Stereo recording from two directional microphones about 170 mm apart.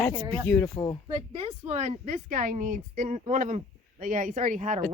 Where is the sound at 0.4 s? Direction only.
10° left (ahead or behind).